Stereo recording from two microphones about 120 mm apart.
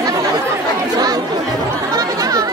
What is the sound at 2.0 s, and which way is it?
Chatter, 30° right (ahead or behind).